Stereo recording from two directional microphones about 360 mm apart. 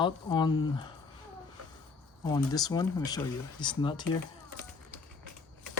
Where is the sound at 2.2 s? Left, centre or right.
Centre.